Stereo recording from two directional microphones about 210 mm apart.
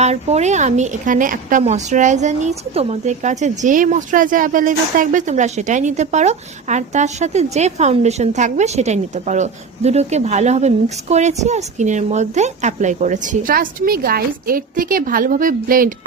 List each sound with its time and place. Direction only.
0.0 s a woman's voice: 30° right (ahead or behind)